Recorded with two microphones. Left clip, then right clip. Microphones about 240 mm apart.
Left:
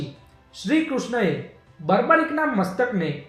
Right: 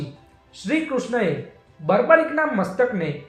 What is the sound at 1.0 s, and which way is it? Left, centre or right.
Speech, left.